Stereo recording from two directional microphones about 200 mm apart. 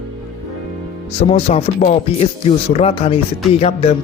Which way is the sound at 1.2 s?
30° left (ahead or behind).